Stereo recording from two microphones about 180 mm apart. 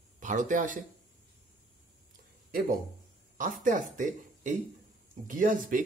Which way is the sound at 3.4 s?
45° right (ahead or behind).